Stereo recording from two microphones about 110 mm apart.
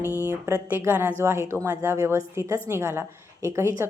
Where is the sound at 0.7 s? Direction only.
20° right (ahead or behind).